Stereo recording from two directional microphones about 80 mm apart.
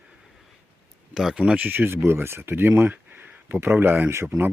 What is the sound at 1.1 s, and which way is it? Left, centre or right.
Speech, centre.